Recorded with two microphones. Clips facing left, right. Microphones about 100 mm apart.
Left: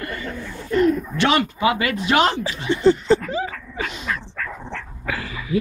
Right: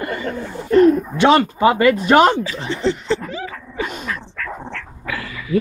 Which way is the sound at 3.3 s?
30° left (ahead or behind).